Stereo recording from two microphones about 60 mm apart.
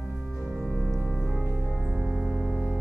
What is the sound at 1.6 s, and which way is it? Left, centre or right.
Music, centre.